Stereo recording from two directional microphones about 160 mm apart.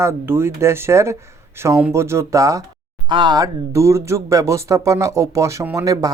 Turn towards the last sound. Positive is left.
turn(degrees=-20)  # may be behind; listen again after turning